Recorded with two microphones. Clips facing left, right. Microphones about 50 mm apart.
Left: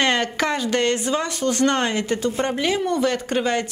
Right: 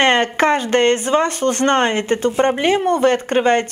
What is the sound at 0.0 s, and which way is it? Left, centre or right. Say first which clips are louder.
A woman's voice: right 6 dB; right.